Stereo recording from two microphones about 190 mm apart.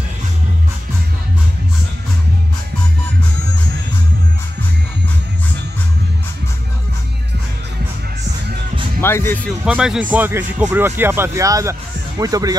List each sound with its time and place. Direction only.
9.0 s speech: 10° left (ahead or behind)
9.7 s speech: 5° right (ahead or behind)